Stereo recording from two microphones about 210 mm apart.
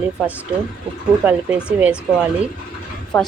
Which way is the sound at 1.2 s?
10° right (ahead or behind).